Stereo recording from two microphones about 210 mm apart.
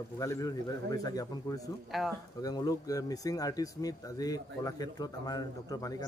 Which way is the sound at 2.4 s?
15° left (ahead or behind).